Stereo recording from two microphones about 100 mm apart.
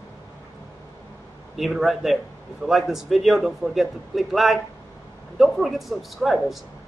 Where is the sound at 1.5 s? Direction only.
Centre (ahead or behind).